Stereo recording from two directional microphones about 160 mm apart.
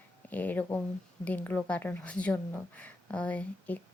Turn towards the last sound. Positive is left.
turn(degrees=10)  # may be behind; listen again after turning